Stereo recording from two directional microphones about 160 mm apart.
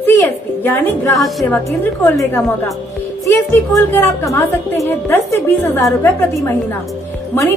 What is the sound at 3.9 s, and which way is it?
A woman's voice, 15° left (ahead or behind).